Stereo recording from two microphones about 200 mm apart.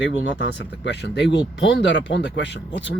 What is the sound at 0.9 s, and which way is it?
Speech, 60° left (ahead or behind).